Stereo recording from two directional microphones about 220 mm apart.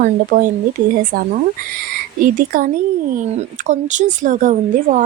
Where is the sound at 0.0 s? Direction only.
35° right (ahead or behind).